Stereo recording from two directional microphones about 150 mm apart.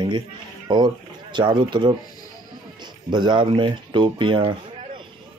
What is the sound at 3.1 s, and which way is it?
Speech, 30° right (ahead or behind).